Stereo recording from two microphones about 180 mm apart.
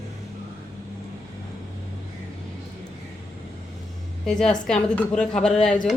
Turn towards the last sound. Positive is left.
turn(degrees=5)  # may be behind; listen again after turning